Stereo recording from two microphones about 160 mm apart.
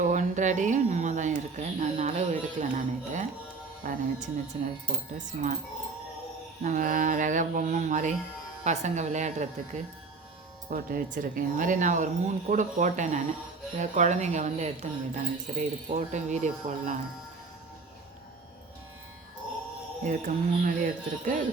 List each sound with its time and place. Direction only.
0.0 s a sound: 50° right (ahead or behind)
3.8 s speech: 50° right (ahead or behind)
6.6 s speech: 55° right (ahead or behind)
10.7 s speech: 65° right (ahead or behind); by 17.0 s 50° right (ahead or behind)
20.1 s speech: 55° right (ahead or behind)